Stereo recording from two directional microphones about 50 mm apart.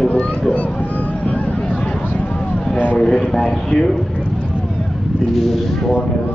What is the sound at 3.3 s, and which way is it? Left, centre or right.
Speech, centre.